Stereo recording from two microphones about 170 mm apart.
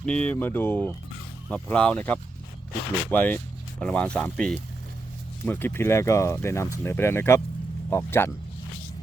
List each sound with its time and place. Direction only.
0.0 s speech: 5° left (ahead or behind)